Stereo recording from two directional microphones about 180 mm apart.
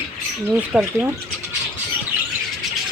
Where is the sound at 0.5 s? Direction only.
10° right (ahead or behind).